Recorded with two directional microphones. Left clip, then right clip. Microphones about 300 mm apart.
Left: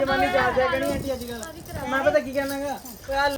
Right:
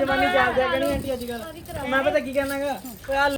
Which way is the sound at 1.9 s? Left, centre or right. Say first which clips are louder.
Even; centre.